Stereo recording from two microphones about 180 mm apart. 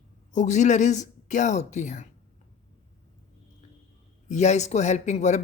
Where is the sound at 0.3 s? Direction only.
40° left (ahead or behind).